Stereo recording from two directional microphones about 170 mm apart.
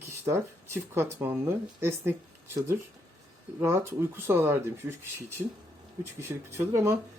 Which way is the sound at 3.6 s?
15° right (ahead or behind).